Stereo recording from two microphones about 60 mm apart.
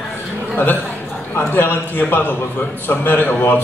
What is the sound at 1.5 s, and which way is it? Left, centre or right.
A man's voice, left.